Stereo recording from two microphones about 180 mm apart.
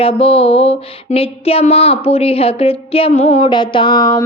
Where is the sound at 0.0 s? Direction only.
30° left (ahead or behind).